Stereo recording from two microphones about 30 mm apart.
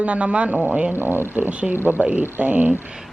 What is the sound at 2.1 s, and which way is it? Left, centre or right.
Speech, right.